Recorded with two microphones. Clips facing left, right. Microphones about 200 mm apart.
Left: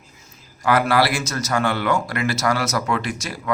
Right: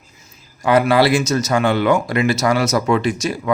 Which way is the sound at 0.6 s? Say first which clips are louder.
Right 4 dB; 20° right (ahead or behind).